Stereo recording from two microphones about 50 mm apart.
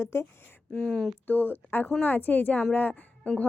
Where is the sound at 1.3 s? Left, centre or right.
Left.